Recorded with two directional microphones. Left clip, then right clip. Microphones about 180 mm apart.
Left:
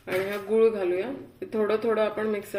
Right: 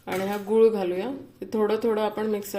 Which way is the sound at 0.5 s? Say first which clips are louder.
Right 2 dB; 60° right (ahead or behind).